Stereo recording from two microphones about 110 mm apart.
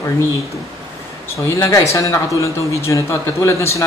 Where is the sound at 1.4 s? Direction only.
25° left (ahead or behind).